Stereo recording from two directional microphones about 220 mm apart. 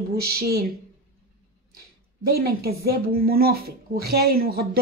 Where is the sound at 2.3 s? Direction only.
45° right (ahead or behind).